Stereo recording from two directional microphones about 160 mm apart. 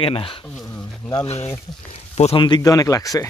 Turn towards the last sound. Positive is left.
turn(degrees=20)  # may be behind; listen again after turning